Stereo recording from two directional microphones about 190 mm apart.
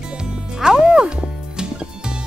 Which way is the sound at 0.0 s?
5° right (ahead or behind).